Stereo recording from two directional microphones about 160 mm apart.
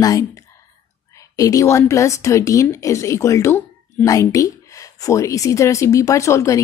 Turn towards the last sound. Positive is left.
turn(degrees=20)  # may be behind; listen again after turning